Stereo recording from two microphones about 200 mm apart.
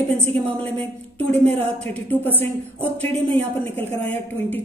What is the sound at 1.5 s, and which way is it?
Speech, 30° right (ahead or behind).